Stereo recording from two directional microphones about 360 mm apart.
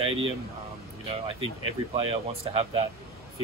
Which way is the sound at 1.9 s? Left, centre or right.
Centre.